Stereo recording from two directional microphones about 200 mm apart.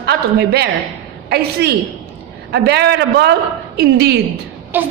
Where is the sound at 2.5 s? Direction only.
55° right (ahead or behind).